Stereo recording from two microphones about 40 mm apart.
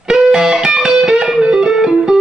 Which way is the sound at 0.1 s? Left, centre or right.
Centre.